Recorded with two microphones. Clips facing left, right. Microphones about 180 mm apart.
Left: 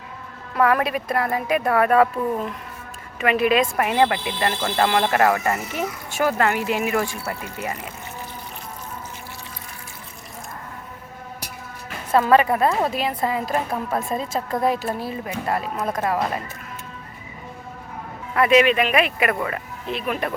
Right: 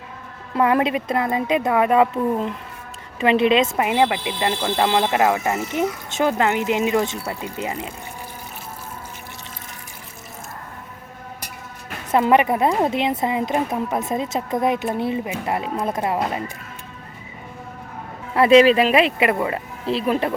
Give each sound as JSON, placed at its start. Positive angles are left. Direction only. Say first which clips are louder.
{"t": 0.5, "sound": "speech", "louder": "right 1 dB", "side_deg": -20}
{"t": 12.1, "sound": "speech", "louder": "even", "side_deg": -20}
{"t": 18.3, "sound": "speech", "louder": "right 4 dB", "side_deg": -30}